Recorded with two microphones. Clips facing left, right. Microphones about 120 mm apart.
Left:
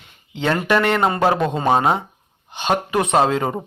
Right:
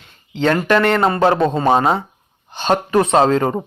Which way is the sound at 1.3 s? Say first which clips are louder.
Right 4 dB; 30° right (ahead or behind).